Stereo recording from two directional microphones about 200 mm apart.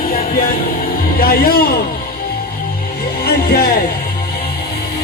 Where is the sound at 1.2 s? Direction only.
50° left (ahead or behind).